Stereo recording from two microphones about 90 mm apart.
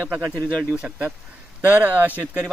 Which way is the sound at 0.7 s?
15° right (ahead or behind).